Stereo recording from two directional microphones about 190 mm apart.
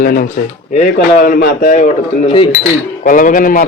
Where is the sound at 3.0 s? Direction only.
45° left (ahead or behind).